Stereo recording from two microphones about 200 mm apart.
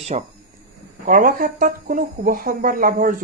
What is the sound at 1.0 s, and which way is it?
Speech, 45° right (ahead or behind).